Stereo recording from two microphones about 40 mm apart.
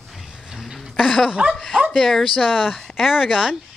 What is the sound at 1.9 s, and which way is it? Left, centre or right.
Speech, centre.